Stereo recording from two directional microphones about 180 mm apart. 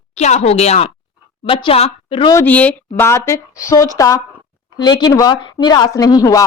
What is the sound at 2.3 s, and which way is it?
Speech, 10° left (ahead or behind).